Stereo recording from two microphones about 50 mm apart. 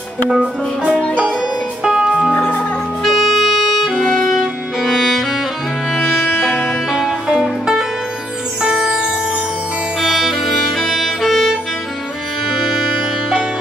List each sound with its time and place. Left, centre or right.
0.3 s music: centre
2.3 s music: left
3.0 s music: centre
8.6 s music: centre
9.9 s music: centre